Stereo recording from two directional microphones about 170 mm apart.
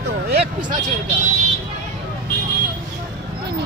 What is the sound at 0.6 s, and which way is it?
Speech, 25° right (ahead or behind).